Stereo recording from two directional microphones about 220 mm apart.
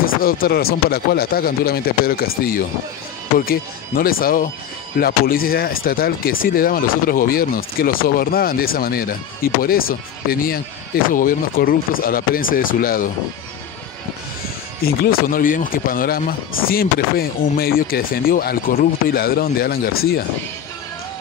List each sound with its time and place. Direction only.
0.0 s speech: 40° left (ahead or behind)
11.1 s speech: 40° left (ahead or behind)
14.8 s speech: 45° left (ahead or behind)